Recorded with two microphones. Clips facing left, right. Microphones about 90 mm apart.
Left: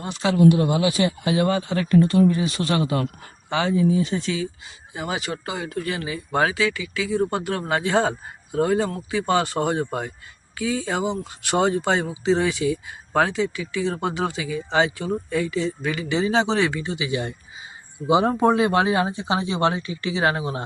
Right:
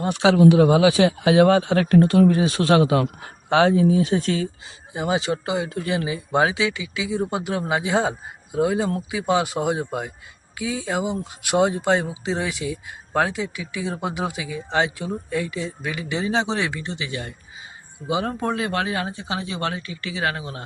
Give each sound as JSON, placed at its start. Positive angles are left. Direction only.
{"t": 0.1, "sound": "speech", "side_deg": -85}
{"t": 4.9, "sound": "speech", "side_deg": -25}
{"t": 17.1, "sound": "speech", "side_deg": 20}